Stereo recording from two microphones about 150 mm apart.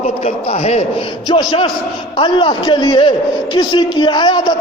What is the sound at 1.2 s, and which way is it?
A man's voice, 35° left (ahead or behind).